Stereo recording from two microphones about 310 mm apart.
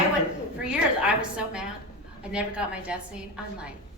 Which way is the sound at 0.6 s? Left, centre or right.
Centre.